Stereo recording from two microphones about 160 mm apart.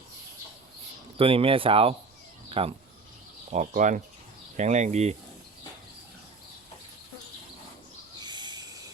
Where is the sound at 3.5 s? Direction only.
50° right (ahead or behind).